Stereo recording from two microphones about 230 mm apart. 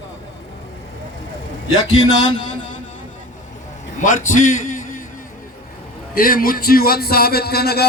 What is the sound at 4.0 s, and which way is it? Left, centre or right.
A man's voice, left.